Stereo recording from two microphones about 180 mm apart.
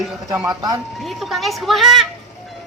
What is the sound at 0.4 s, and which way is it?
Speech, 20° right (ahead or behind).